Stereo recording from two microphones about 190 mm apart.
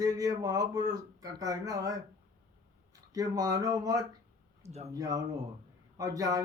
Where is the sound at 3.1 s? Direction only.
20° right (ahead or behind).